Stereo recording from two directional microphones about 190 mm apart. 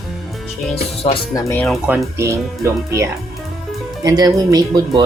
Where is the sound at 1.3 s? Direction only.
15° left (ahead or behind).